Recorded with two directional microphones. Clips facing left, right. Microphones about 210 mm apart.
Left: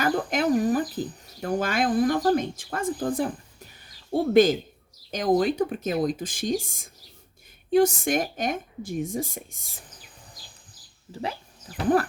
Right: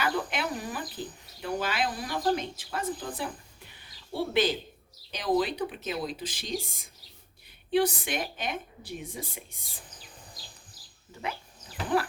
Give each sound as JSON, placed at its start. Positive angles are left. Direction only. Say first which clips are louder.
{"t": 0.0, "sound": "speech", "louder": "left 6 dB", "side_deg": 45}
{"t": 3.0, "sound": "a sound", "louder": "left 10 dB", "side_deg": 45}
{"t": 5.1, "sound": "speech", "louder": "left 5 dB", "side_deg": 45}
{"t": 11.1, "sound": "speech", "louder": "left 4 dB", "side_deg": 35}